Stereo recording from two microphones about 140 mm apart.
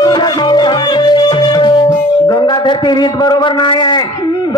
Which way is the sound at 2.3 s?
30° left (ahead or behind).